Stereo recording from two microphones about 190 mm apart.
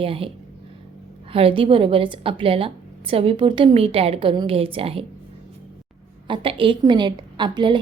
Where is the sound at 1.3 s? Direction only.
30° right (ahead or behind).